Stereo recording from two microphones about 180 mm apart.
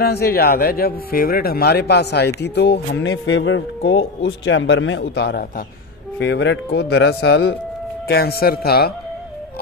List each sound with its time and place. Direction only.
0.0 s a man's voice: 60° left (ahead or behind)
6.1 s a man's voice: 80° left
8.1 s speech: 60° left (ahead or behind)